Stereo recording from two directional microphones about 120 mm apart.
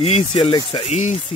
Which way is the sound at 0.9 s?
70° left (ahead or behind).